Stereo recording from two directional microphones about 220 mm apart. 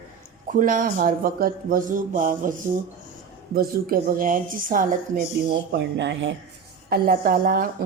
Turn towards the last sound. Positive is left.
turn(degrees=-40)  # may be behind; listen again after turning